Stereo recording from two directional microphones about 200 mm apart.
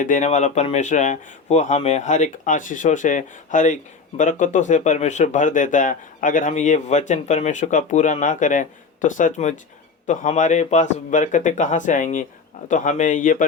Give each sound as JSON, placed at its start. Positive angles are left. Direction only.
{"t": 0.0, "sound": "speech", "side_deg": 35}